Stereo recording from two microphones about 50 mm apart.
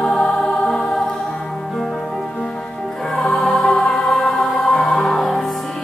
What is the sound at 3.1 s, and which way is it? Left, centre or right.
Music, centre.